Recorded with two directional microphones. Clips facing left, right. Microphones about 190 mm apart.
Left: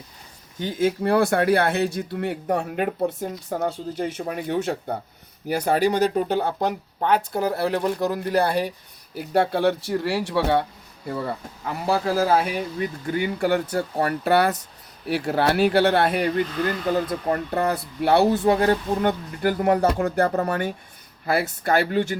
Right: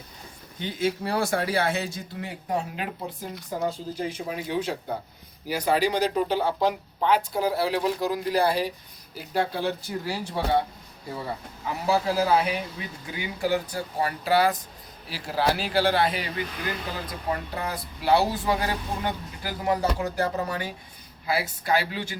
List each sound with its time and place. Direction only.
0.6 s speech: 50° left (ahead or behind)
9.1 s speech: 65° left (ahead or behind)
11.9 s speech: 50° left (ahead or behind)